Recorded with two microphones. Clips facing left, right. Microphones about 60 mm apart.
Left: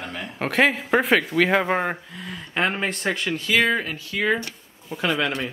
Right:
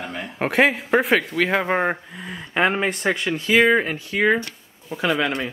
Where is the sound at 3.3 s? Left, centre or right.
Right.